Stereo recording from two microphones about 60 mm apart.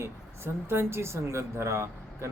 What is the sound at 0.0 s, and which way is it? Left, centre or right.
A man's voice, right.